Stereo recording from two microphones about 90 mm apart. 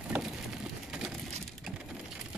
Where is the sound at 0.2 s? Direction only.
10° right (ahead or behind).